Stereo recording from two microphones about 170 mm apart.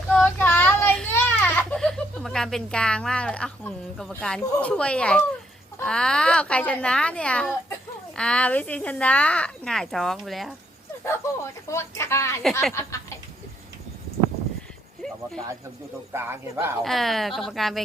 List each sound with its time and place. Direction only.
0.2 s a sound: 10° left (ahead or behind)
5.8 s a child's voice: 5° left (ahead or behind)
11.0 s speech: 15° left (ahead or behind)
15.0 s a sound: 5° left (ahead or behind)
16.1 s speech: 15° right (ahead or behind)
16.8 s a child's voice: centre (ahead or behind)